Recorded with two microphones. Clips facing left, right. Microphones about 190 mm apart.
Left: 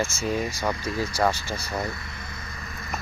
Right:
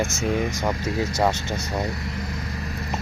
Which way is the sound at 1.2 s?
20° right (ahead or behind).